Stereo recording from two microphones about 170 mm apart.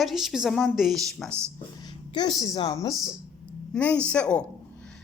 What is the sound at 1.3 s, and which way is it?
Speech, 15° right (ahead or behind).